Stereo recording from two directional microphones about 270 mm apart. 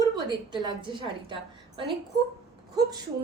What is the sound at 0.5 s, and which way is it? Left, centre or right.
A woman's voice, centre.